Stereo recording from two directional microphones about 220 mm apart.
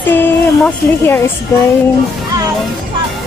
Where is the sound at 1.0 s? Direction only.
10° left (ahead or behind).